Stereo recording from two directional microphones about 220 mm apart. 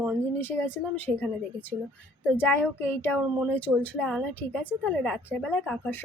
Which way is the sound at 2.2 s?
10° left (ahead or behind).